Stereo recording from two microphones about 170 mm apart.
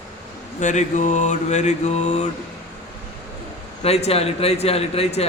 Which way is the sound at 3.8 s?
40° left (ahead or behind).